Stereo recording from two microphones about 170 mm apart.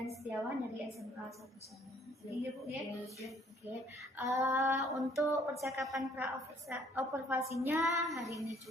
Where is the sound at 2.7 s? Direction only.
Centre (ahead or behind).